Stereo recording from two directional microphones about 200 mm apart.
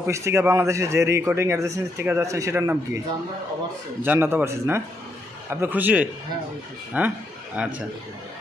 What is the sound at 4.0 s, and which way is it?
A man's voice, 10° right (ahead or behind).